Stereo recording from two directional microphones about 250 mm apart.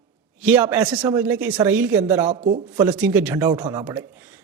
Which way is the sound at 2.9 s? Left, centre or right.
Centre.